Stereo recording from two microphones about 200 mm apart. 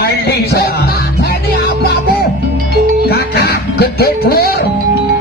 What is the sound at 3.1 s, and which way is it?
Music, 50° left (ahead or behind).